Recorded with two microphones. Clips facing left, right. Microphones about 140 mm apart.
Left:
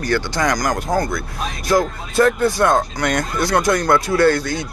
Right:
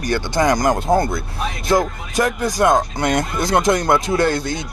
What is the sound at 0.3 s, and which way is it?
Speech, 25° right (ahead or behind).